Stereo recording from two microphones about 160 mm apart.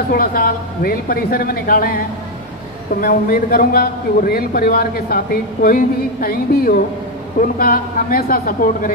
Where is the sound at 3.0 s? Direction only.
65° left (ahead or behind).